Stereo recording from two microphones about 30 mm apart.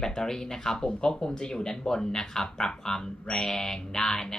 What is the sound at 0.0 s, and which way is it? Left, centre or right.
Speech, centre.